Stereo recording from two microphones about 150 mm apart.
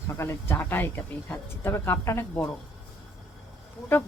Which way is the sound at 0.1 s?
20° left (ahead or behind).